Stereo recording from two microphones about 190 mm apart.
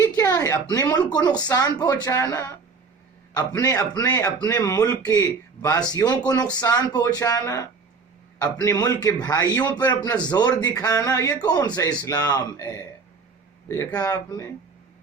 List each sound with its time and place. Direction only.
0.0 s a man's voice: 15° left (ahead or behind)
8.6 s a man's voice: 20° left (ahead or behind)